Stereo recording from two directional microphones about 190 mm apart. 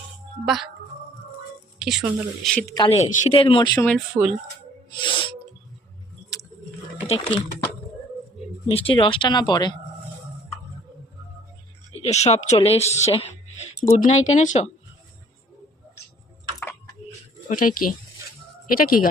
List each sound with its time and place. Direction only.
0.4 s speech: centre (ahead or behind)
1.8 s speech: centre (ahead or behind)
2.6 s speech: 20° left (ahead or behind)
2.9 s speech: 40° left (ahead or behind)
3.8 s speech: centre (ahead or behind)
4.9 s music: 25° left (ahead or behind)
7.1 s speech: 30° left (ahead or behind)
8.7 s speech: 30° left (ahead or behind)
11.9 s speech: 35° left (ahead or behind)
17.5 s speech: 45° left (ahead or behind)